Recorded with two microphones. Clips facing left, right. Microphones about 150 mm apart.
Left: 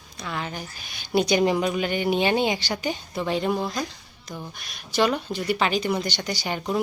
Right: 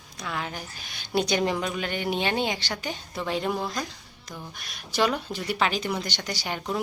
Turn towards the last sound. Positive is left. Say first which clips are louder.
# left 4 dB
turn(degrees=5)  # may be behind; listen again after turning